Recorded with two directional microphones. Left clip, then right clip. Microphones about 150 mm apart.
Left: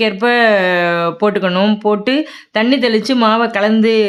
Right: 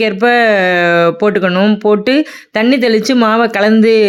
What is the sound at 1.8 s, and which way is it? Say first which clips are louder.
Speech: right 4 dB; 25° right (ahead or behind).